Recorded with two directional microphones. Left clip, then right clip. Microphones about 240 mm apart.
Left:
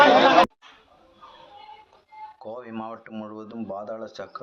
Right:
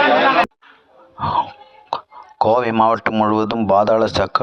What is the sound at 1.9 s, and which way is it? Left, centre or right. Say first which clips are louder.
Speech: right 16 dB; right.